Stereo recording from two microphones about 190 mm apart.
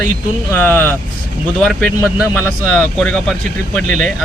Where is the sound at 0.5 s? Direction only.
10° left (ahead or behind).